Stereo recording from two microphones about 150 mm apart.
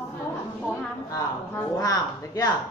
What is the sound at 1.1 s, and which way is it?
A woman's voice, 20° left (ahead or behind).